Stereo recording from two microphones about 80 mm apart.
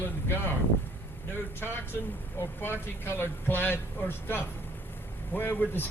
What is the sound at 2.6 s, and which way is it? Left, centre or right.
A man's voice, left.